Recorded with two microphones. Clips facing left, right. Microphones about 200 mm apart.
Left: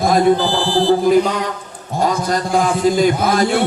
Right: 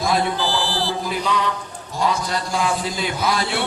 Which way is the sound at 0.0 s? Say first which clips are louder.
Left 8 dB; 50° left (ahead or behind).